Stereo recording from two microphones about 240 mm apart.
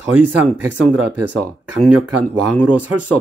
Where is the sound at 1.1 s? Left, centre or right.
Right.